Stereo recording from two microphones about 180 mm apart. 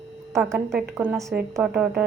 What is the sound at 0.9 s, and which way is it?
A woman's voice, 10° right (ahead or behind).